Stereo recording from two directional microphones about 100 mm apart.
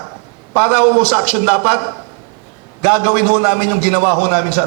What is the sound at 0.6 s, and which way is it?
A man's voice, 10° right (ahead or behind).